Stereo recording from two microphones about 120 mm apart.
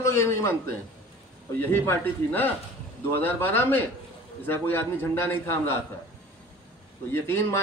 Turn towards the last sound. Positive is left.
turn(degrees=20)  # may be behind; listen again after turning